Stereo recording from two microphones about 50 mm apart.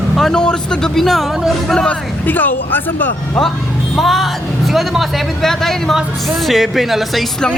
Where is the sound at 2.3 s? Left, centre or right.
Left.